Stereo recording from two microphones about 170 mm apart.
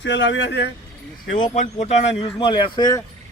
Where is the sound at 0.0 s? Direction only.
90° left.